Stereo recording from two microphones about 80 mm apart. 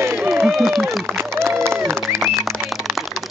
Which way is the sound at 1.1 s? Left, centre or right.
Right.